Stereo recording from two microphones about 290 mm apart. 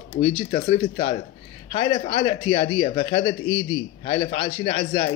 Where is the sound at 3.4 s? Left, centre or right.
Left.